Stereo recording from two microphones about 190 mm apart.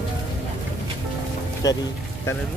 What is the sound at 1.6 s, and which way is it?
Music, 20° left (ahead or behind).